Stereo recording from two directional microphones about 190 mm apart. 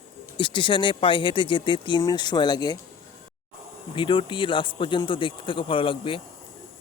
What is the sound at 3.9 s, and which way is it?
Speech, 25° left (ahead or behind).